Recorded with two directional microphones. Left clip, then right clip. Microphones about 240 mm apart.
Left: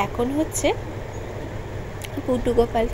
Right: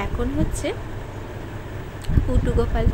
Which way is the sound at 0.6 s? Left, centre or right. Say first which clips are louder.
Left 7 dB; centre.